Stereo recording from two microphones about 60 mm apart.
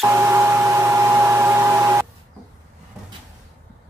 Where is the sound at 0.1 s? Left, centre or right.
Right.